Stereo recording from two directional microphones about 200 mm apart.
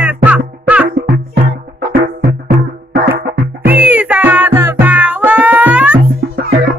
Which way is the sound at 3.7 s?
10° right (ahead or behind).